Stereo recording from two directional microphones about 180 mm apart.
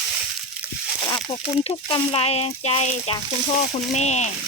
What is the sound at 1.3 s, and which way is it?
Speech, 30° left (ahead or behind).